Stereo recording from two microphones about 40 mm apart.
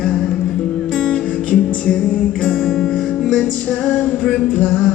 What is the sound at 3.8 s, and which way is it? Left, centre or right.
Speech, left.